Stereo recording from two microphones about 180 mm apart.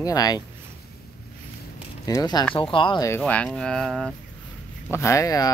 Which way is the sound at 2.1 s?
20° left (ahead or behind).